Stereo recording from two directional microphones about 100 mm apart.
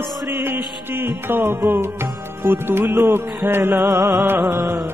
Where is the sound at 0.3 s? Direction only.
20° right (ahead or behind).